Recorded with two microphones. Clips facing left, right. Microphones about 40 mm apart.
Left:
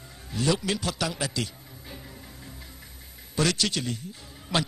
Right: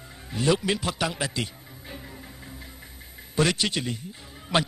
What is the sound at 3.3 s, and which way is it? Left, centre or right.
A man's voice, right.